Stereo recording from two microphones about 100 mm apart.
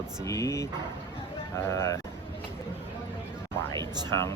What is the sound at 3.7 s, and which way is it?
Speech, 45° right (ahead or behind).